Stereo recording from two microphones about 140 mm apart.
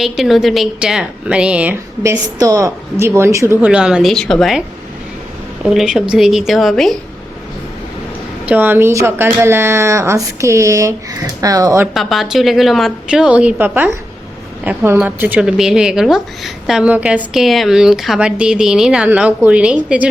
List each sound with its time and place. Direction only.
0.0 s speech: centre (ahead or behind)
2.0 s speech: 25° right (ahead or behind)
3.7 s speech: 5° right (ahead or behind)
5.6 s speech: 5° right (ahead or behind)
8.4 s speech: 15° right (ahead or behind)
11.9 s speech: centre (ahead or behind)